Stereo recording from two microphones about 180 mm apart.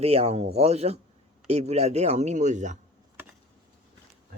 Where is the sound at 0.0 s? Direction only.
35° right (ahead or behind).